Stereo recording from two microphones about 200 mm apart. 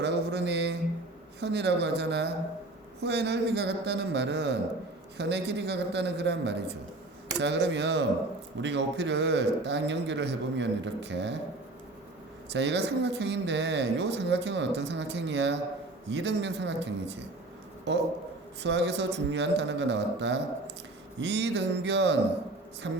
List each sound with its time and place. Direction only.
0.0 s a sound: 60° right (ahead or behind)
1.4 s speech: 60° right (ahead or behind)
12.5 s speech: 60° right (ahead or behind)